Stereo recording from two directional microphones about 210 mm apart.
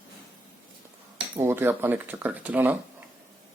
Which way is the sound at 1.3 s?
10° right (ahead or behind).